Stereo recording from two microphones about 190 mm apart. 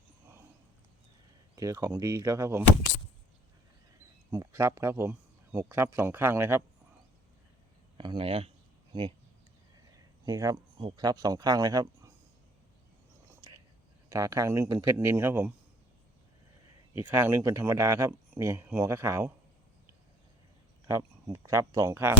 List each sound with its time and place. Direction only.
1.5 s speech: 15° right (ahead or behind)
4.3 s speech: 15° right (ahead or behind)
7.9 s a sound: 25° right (ahead or behind)
10.2 s speech: 20° right (ahead or behind)
14.1 s speech: 15° right (ahead or behind)
17.0 s speech: 10° right (ahead or behind)
20.8 s speech: 15° right (ahead or behind)